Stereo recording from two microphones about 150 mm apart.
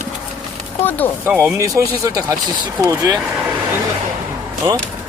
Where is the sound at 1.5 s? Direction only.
20° right (ahead or behind).